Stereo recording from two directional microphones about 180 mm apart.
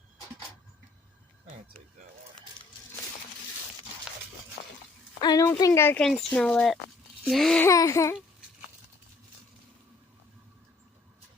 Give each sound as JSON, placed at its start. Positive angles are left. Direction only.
{"t": 5.2, "sound": "speech", "side_deg": 20}
{"t": 7.6, "sound": "speech", "side_deg": 15}